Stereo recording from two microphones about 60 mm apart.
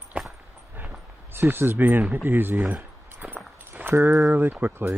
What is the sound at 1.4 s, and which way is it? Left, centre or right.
Speech, right.